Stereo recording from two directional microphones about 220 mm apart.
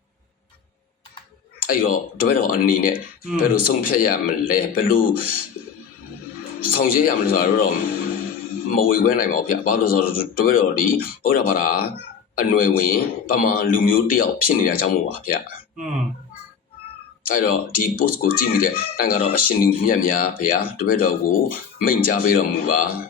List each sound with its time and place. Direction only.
1.5 s speech: 40° left (ahead or behind)
6.7 s speech: 40° left (ahead or behind)
17.2 s speech: 40° left (ahead or behind)